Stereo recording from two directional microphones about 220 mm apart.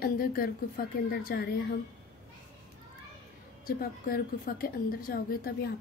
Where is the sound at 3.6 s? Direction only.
40° left (ahead or behind).